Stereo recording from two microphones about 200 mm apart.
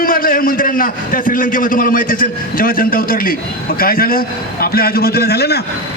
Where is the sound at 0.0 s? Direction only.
45° left (ahead or behind).